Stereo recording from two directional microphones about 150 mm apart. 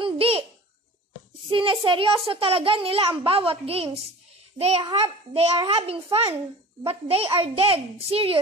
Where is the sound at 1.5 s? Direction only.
35° right (ahead or behind).